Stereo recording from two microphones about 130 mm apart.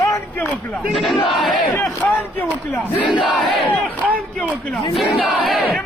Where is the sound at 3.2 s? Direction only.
Centre (ahead or behind).